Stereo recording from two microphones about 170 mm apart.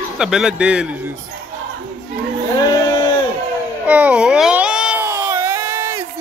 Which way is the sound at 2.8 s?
30° left (ahead or behind).